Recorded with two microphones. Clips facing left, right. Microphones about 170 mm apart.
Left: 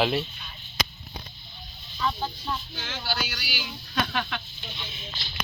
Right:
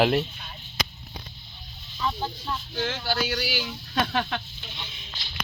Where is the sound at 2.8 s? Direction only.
50° right (ahead or behind).